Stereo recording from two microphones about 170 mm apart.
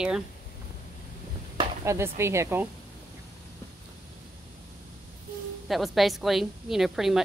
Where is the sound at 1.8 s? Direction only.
15° right (ahead or behind).